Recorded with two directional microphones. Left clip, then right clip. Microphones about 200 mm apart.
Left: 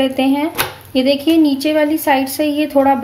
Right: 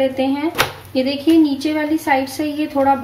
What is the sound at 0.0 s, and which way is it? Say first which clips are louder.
A woman's voice: left 2 dB; 50° left (ahead or behind).